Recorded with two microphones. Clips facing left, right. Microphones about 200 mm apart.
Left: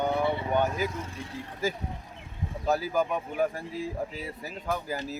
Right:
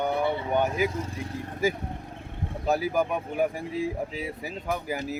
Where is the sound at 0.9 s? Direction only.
35° right (ahead or behind).